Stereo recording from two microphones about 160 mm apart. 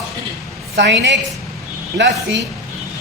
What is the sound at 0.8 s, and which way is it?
Speech, 90° right.